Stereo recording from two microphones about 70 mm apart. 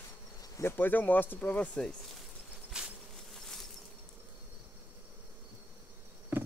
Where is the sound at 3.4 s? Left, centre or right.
Centre.